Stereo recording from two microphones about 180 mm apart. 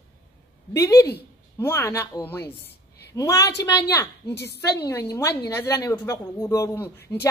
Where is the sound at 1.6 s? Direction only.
15° left (ahead or behind).